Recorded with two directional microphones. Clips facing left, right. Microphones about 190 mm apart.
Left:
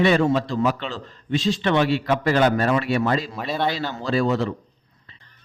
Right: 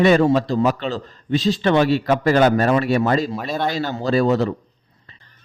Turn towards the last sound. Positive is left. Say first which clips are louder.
# right 4 dB
turn(degrees=-40)  # may be behind; listen again after turning